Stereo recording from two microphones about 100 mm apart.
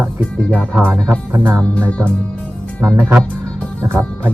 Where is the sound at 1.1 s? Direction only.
25° right (ahead or behind).